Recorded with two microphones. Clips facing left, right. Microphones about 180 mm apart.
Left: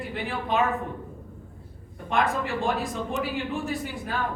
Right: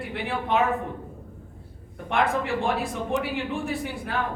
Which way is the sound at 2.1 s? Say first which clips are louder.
Right 1 dB; 60° right (ahead or behind).